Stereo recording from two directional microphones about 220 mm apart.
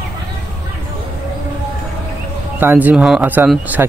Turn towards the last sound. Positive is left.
turn(degrees=-5)  # may be behind; listen again after turning